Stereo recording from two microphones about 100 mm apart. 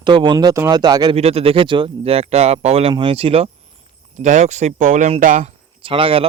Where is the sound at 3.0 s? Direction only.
65° right (ahead or behind).